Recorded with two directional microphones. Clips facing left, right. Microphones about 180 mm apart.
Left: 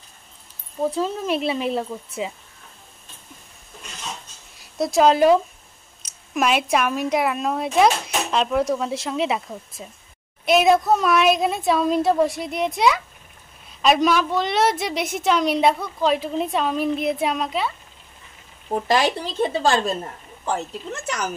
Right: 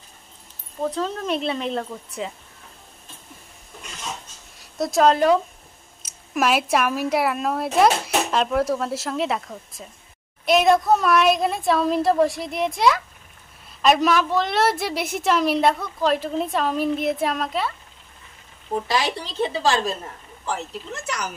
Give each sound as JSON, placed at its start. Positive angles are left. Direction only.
{"t": 0.8, "sound": "speech", "side_deg": 10}
{"t": 4.6, "sound": "a woman's voice", "side_deg": 0}
{"t": 18.9, "sound": "speech", "side_deg": 50}